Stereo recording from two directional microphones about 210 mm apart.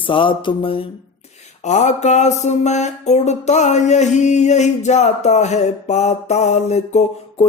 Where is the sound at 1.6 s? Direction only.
35° left (ahead or behind).